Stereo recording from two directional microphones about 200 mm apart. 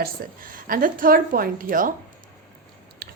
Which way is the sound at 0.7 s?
45° right (ahead or behind).